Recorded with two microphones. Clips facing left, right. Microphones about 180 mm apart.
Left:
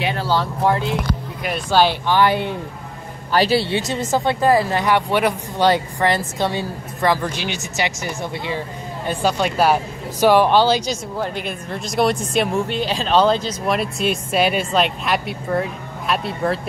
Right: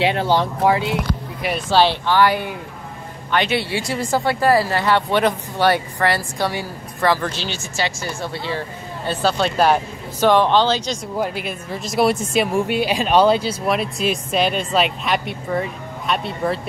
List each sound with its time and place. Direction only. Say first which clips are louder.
0.0 s speech: right 3 dB; 20° right (ahead or behind)
0.7 s speech: even; 5° right (ahead or behind)
2.0 s speech: even; 20° left (ahead or behind)
3.3 s speech: left 3 dB; 35° left (ahead or behind); by 11.0 s 10° left (ahead or behind)
11.1 s speech: right 1 dB; 5° right (ahead or behind)